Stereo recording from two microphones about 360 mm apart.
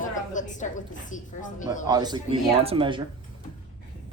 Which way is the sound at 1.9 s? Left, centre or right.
Centre.